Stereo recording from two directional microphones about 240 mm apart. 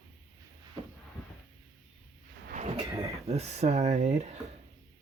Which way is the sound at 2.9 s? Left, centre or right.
Centre.